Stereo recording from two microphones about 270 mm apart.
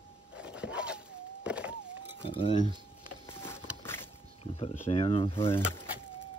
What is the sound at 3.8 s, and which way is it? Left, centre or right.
Boat, centre.